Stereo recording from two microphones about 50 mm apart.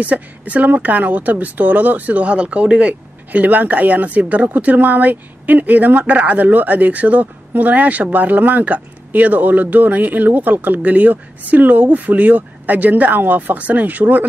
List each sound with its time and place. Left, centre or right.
0.0 s speech: right